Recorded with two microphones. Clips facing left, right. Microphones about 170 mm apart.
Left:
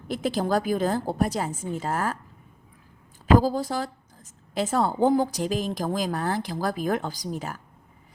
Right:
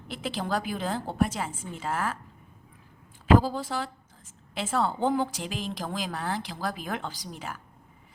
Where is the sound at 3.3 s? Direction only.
40° left (ahead or behind).